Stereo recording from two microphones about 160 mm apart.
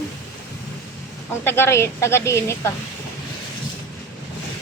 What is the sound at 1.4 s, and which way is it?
Speech, 15° left (ahead or behind).